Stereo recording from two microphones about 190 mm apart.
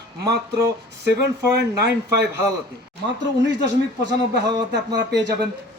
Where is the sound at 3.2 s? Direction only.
70° right (ahead or behind).